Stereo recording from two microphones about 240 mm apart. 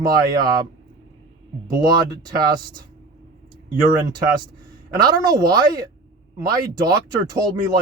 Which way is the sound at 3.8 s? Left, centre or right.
Centre.